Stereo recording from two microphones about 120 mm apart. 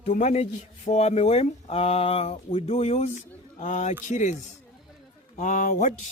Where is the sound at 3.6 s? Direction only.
85° left.